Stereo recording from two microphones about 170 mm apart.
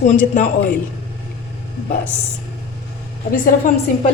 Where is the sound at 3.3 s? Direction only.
55° left (ahead or behind).